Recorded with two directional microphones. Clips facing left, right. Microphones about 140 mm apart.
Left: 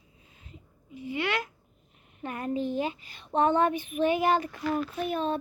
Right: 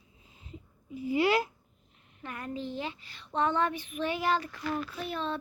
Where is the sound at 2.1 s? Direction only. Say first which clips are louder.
Left 7 dB; 25° left (ahead or behind).